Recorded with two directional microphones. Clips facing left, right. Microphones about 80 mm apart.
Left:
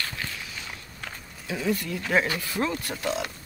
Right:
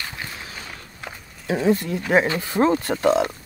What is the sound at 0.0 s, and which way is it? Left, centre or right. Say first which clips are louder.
Walk: right 1 dB; right.